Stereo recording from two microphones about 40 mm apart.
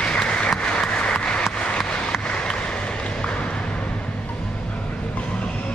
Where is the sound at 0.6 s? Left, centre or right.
Left.